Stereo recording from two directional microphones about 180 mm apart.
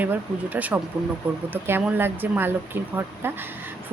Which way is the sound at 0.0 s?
10° right (ahead or behind).